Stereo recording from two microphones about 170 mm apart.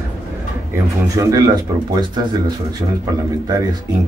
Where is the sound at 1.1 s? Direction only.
20° right (ahead or behind).